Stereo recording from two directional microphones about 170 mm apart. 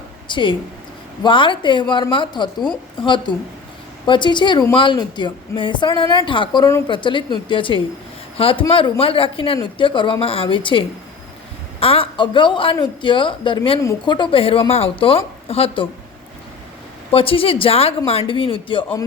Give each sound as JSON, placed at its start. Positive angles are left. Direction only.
{"t": 0.3, "sound": "a woman's voice", "side_deg": 30}
{"t": 17.1, "sound": "a woman's voice", "side_deg": 35}